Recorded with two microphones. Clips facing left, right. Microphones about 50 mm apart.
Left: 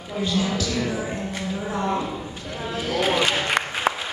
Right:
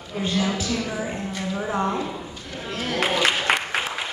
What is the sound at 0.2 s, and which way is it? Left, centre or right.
Speech, right.